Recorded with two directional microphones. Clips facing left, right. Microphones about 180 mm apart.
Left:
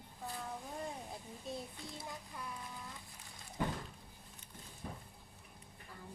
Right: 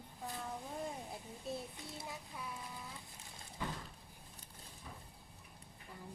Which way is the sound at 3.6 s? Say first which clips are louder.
Left 5 dB; 55° left (ahead or behind).